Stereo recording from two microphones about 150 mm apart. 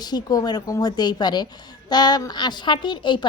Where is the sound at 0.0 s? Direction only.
25° left (ahead or behind).